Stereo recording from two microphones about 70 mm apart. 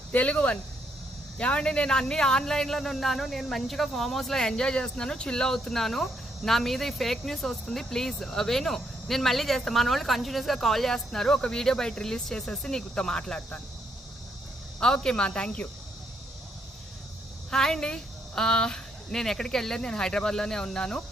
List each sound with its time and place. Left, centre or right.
0.1 s speech: left
14.8 s a woman's voice: centre
17.5 s a woman's voice: centre